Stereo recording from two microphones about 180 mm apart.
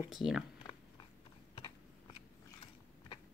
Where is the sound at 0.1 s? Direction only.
5° right (ahead or behind).